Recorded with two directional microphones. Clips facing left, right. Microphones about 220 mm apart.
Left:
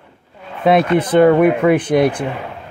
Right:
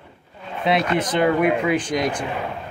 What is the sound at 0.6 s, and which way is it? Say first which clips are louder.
Speech: left 7 dB; 55° left (ahead or behind).